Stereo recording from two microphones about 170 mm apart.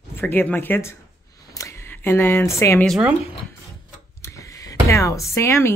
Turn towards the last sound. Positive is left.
turn(degrees=15)  # may be behind; listen again after turning